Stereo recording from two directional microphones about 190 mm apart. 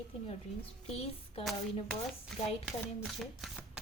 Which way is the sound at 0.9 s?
30° left (ahead or behind).